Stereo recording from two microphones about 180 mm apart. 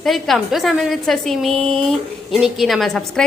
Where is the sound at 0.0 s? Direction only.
Centre (ahead or behind).